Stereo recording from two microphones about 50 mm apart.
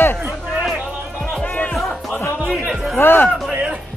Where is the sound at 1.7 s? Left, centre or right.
Centre.